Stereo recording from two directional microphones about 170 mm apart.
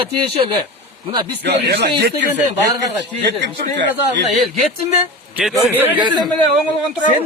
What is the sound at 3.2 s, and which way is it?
A man's voice, 85° right.